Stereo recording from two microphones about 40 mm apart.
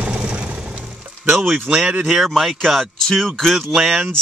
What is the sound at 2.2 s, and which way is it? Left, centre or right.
Speech, centre.